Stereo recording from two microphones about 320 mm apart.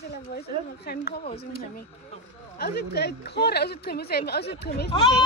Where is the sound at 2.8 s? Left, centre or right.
Left.